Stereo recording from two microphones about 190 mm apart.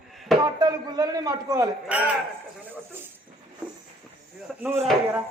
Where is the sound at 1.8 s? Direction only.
5° right (ahead or behind).